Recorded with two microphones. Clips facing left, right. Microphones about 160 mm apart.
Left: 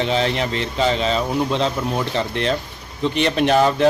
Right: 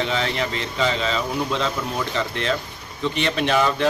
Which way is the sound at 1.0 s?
30° left (ahead or behind).